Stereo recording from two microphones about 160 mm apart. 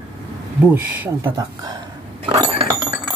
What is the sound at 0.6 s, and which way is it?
Speech, 10° right (ahead or behind).